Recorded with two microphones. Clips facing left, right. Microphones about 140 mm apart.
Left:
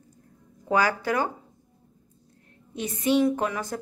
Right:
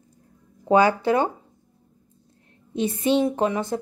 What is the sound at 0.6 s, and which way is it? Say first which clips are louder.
Speech: right 6 dB; 25° right (ahead or behind).